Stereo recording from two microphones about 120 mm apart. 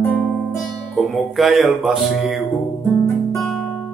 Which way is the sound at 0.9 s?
5° left (ahead or behind).